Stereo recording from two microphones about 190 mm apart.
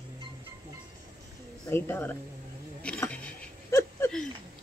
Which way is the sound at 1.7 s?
10° left (ahead or behind).